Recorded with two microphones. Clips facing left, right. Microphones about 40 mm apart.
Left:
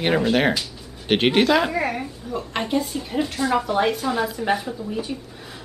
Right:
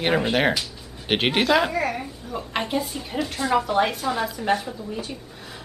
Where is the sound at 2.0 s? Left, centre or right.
Centre.